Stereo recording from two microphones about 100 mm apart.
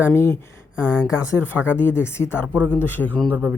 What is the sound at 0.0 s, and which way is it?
Speech, 25° left (ahead or behind).